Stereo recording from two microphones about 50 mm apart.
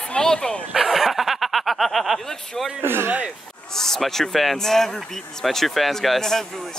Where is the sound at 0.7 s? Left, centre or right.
Centre.